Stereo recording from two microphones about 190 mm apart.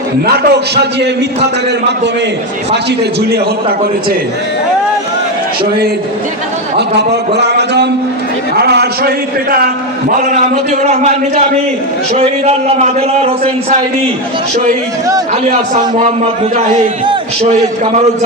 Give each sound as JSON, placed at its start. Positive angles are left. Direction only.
{"t": 0.3, "sound": "a man's voice", "side_deg": -60}
{"t": 6.7, "sound": "a man's voice", "side_deg": -60}
{"t": 10.5, "sound": "a man's voice", "side_deg": -40}